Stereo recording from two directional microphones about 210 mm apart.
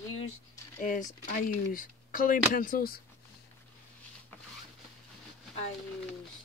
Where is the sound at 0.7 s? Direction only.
40° left (ahead or behind).